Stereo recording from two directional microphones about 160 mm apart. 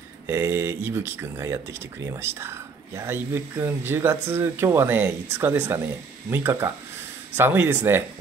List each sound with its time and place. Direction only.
0.3 s speech: 15° right (ahead or behind)